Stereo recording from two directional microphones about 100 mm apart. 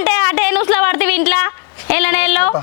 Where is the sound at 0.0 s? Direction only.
20° left (ahead or behind).